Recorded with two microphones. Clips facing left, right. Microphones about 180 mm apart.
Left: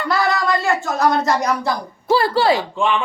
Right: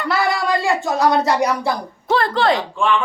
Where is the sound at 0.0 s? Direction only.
10° right (ahead or behind).